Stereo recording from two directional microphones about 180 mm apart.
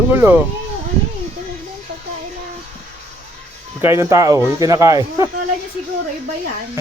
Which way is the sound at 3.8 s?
15° right (ahead or behind).